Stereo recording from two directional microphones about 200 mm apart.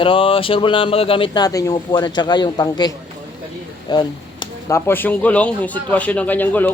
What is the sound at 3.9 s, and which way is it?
Speech, 20° left (ahead or behind).